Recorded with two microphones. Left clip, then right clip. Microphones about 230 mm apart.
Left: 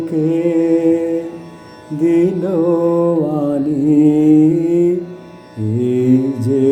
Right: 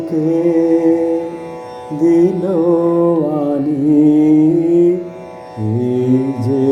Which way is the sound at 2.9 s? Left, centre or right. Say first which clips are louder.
Right 1 dB; centre.